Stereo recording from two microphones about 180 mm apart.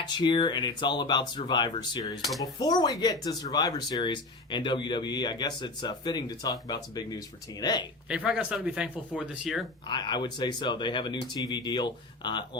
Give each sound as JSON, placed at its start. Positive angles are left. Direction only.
{"t": 0.0, "sound": "speech", "side_deg": 25}
{"t": 8.1, "sound": "speech", "side_deg": -5}
{"t": 9.8, "sound": "speech", "side_deg": 25}